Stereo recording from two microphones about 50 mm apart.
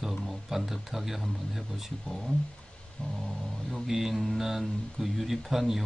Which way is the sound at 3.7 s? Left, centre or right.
Centre.